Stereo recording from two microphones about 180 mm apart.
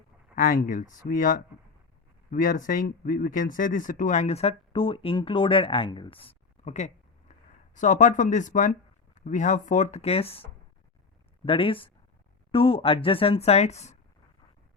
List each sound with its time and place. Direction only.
0.3 s speech: 50° left (ahead or behind)
11.4 s speech: 30° left (ahead or behind)